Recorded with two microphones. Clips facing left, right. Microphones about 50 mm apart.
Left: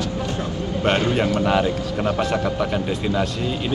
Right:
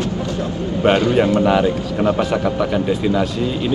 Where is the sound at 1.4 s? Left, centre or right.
Centre.